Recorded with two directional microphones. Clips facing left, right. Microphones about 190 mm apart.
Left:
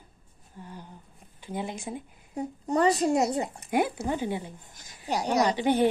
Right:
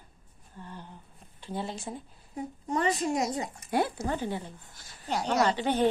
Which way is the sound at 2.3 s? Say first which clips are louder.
Left 4 dB; 35° left (ahead or behind).